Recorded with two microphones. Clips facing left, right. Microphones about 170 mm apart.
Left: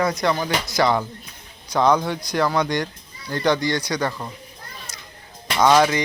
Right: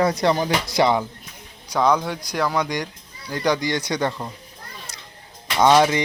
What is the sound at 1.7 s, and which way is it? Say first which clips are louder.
Speech: left 1 dB; 5° right (ahead or behind).